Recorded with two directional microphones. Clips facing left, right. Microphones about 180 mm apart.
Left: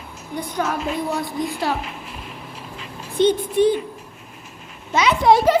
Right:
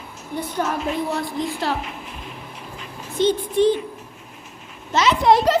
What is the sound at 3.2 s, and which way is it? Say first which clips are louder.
Speech: left 2 dB; 55° left (ahead or behind).